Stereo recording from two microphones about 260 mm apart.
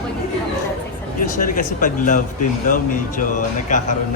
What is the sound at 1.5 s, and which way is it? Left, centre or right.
Speech, left.